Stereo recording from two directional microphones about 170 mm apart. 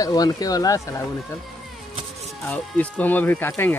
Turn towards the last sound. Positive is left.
turn(degrees=15)  # may be behind; listen again after turning